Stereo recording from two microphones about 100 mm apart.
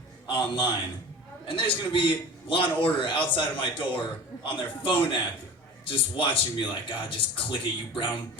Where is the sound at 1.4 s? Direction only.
60° left (ahead or behind).